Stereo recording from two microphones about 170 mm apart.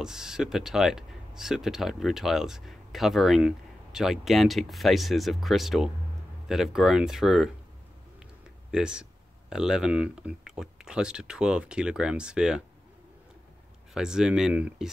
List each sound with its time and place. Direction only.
0.0 s speech: 5° right (ahead or behind)
8.7 s speech: 5° right (ahead or behind)
13.9 s speech: 5° right (ahead or behind)